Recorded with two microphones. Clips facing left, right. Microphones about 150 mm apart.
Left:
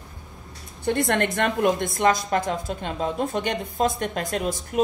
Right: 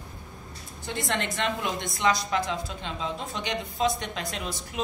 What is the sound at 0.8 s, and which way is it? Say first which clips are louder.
A woman's voice: left 8 dB; 60° left (ahead or behind).